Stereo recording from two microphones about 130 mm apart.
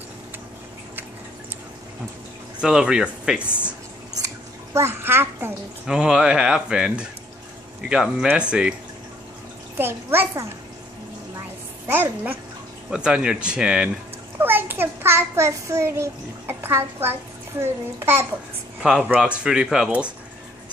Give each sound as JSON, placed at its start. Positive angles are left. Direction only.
{"t": 2.6, "sound": "speech", "side_deg": -5}
{"t": 4.7, "sound": "speech", "side_deg": -20}
{"t": 5.9, "sound": "speech", "side_deg": -5}
{"t": 9.8, "sound": "speech", "side_deg": -15}
{"t": 11.9, "sound": "a child's voice", "side_deg": -15}
{"t": 18.8, "sound": "speech", "side_deg": -5}